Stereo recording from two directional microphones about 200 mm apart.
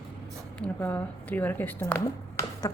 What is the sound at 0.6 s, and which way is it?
A woman's voice, 10° left (ahead or behind).